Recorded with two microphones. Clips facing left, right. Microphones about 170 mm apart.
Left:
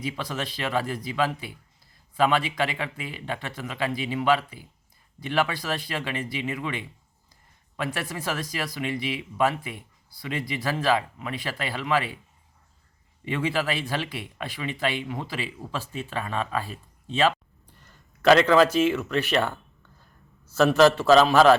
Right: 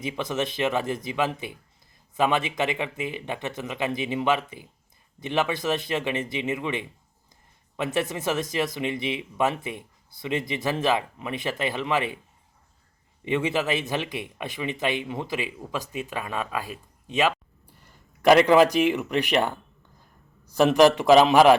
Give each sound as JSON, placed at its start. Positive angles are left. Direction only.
{"t": 0.0, "sound": "speech", "side_deg": -20}
{"t": 13.2, "sound": "speech", "side_deg": -20}